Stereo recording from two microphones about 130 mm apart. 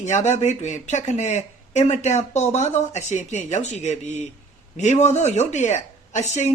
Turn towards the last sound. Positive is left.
turn(degrees=60)  # may be behind; listen again after turning